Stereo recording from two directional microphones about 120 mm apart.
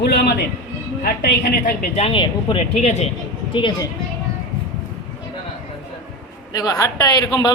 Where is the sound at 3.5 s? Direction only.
45° left (ahead or behind).